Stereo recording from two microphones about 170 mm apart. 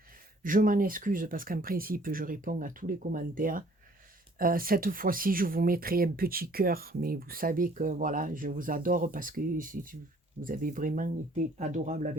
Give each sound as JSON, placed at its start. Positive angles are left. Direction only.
{"t": 0.4, "sound": "speech", "side_deg": -55}